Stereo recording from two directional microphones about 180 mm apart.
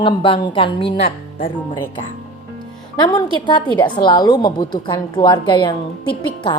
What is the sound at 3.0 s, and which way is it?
Speech, 25° left (ahead or behind).